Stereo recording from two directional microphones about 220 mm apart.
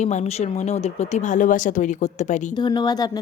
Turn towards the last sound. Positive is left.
turn(degrees=20)  # may be behind; listen again after turning